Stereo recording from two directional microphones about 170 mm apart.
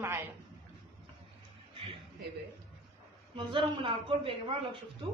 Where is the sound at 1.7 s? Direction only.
30° right (ahead or behind).